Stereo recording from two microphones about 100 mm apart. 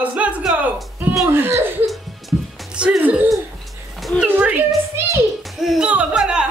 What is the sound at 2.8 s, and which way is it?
Speech, 10° right (ahead or behind).